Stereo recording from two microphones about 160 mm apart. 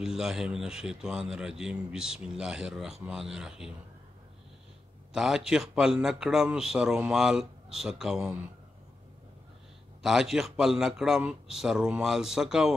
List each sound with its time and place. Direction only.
0.0 s a man's voice: 5° right (ahead or behind)
5.1 s a man's voice: 5° right (ahead or behind)
10.0 s a man's voice: 5° right (ahead or behind)